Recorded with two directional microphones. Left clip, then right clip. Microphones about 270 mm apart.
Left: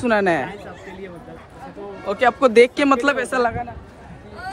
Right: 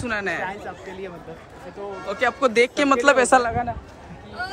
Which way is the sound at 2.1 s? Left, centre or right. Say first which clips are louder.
Left 5 dB; centre.